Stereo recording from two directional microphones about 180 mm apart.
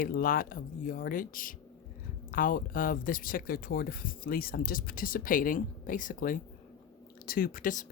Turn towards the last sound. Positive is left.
turn(degrees=45)  # may be behind; listen again after turning